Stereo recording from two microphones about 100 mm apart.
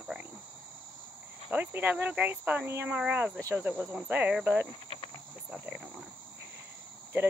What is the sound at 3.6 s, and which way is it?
Insect, 15° right (ahead or behind).